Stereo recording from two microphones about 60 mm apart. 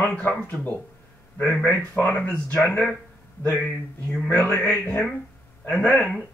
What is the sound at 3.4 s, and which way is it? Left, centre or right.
Speech, left.